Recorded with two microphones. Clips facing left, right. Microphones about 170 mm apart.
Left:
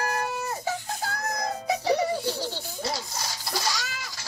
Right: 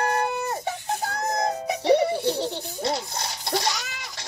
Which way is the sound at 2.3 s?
25° right (ahead or behind).